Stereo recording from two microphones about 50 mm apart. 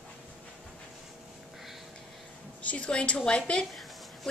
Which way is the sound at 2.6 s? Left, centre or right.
Left.